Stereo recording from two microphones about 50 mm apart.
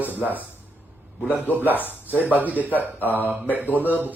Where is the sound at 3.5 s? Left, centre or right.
Right.